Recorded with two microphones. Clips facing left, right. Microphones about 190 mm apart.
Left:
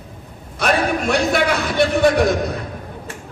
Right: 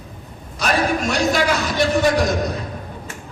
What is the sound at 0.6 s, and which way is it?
A man's voice, 60° left (ahead or behind).